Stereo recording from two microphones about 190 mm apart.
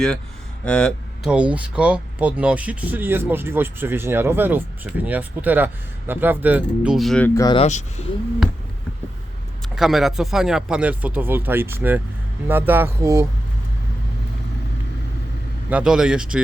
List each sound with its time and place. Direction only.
0.6 s speech: 5° left (ahead or behind)
7.3 s speech: 20° left (ahead or behind)
7.6 s speech: 35° left (ahead or behind)
9.7 s speech: centre (ahead or behind)
15.7 s speech: 5° right (ahead or behind)